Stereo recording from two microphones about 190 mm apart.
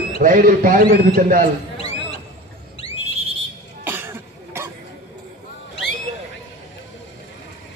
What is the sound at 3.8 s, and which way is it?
Cough, 10° right (ahead or behind).